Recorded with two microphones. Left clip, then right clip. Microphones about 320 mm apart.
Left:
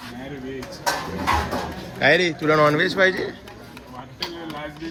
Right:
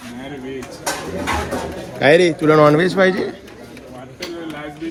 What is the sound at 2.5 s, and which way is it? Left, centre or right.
Speech, centre.